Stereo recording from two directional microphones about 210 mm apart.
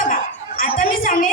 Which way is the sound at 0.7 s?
40° left (ahead or behind).